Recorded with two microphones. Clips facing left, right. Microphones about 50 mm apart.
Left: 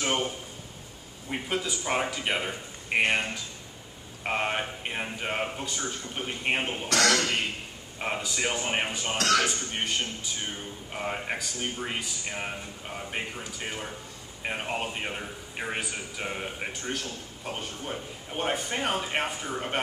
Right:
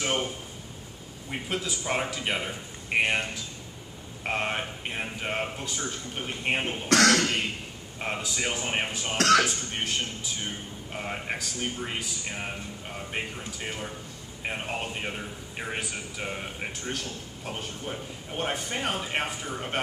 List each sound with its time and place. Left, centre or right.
0.0 s a sound: centre
1.3 s speech: centre
6.9 s speech: right
8.0 s a man's voice: centre